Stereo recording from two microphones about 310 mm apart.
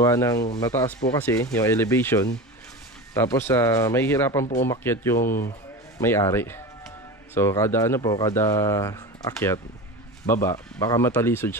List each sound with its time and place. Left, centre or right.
0.0 s speech: centre